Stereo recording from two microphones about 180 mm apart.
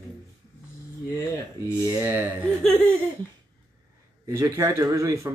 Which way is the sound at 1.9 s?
15° right (ahead or behind).